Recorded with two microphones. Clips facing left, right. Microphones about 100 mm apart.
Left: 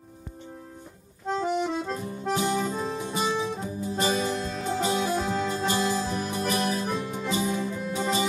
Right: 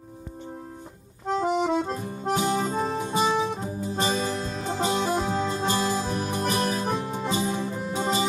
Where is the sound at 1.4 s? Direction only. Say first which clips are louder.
Right 4 dB; 50° right (ahead or behind).